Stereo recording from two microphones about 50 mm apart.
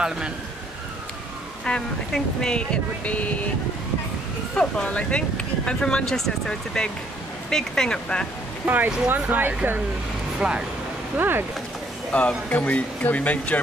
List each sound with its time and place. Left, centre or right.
1.6 s speech: centre
4.6 s speech: left
8.6 s speech: right
10.4 s speech: centre
11.1 s speech: right
12.1 s speech: left